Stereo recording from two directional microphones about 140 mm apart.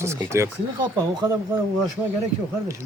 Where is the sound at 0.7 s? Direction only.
30° right (ahead or behind).